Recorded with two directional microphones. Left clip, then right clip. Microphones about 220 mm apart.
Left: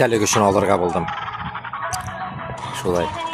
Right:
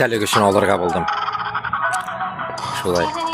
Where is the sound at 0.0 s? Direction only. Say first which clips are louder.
Even; 5° left (ahead or behind).